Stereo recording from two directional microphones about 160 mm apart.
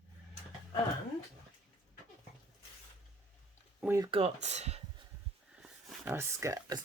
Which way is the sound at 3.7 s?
10° right (ahead or behind).